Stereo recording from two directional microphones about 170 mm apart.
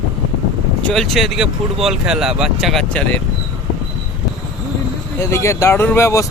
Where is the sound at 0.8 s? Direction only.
Centre (ahead or behind).